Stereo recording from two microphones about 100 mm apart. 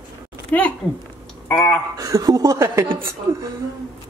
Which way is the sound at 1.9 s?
35° right (ahead or behind).